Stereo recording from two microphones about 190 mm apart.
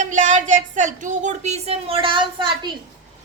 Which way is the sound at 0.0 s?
40° right (ahead or behind).